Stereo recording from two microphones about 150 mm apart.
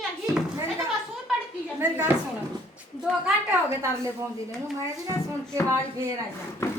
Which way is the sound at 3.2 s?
15° right (ahead or behind).